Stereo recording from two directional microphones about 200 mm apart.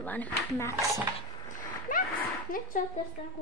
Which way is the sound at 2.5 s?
45° left (ahead or behind).